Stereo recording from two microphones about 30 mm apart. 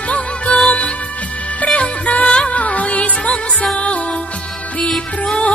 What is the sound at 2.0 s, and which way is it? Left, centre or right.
Music, left.